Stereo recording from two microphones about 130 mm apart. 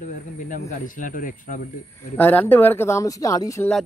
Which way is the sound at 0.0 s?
90° left.